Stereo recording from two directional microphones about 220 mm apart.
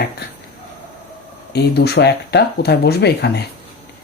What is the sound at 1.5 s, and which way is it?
Speech, 50° left (ahead or behind).